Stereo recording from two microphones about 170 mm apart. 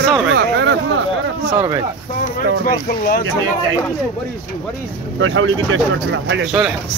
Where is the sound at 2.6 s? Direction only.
60° left (ahead or behind).